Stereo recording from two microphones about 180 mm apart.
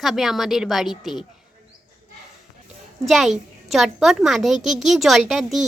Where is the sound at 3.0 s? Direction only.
Centre (ahead or behind).